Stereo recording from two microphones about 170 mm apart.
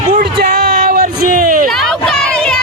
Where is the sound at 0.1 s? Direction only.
60° right (ahead or behind).